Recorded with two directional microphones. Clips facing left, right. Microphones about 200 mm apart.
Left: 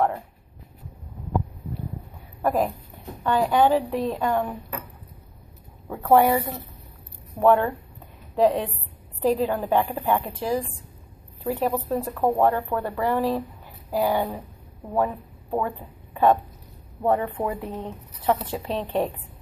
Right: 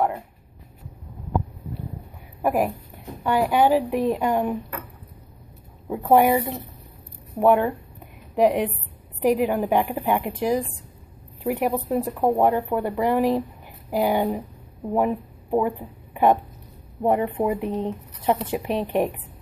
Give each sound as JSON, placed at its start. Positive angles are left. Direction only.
{"t": 2.4, "sound": "speech", "side_deg": -10}
{"t": 5.9, "sound": "speech", "side_deg": -15}